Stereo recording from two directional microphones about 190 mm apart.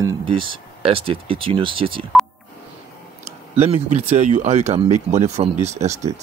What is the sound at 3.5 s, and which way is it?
Speech, 35° right (ahead or behind).